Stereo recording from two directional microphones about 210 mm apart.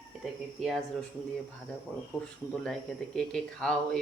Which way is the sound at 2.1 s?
5° left (ahead or behind).